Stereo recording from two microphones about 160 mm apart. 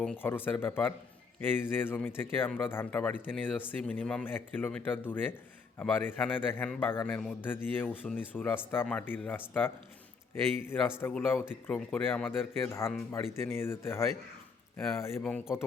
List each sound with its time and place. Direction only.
0.0 s speech: 10° left (ahead or behind)
11.0 s speech: 10° left (ahead or behind)
15.2 s speech: 5° left (ahead or behind)